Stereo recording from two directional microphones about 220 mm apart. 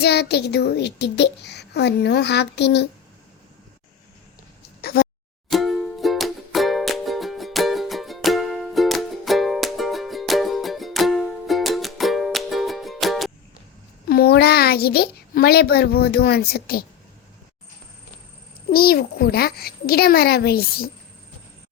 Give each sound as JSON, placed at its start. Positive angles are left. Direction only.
{"t": 0.0, "sound": "a child's voice", "side_deg": 50}
{"t": 4.8, "sound": "a sound", "side_deg": 45}
{"t": 5.5, "sound": "music", "side_deg": 0}
{"t": 14.1, "sound": "a child's voice", "side_deg": 45}
{"t": 18.7, "sound": "a child's voice", "side_deg": 45}